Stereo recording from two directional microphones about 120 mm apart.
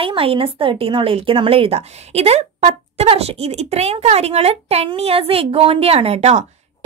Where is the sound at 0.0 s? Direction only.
50° right (ahead or behind).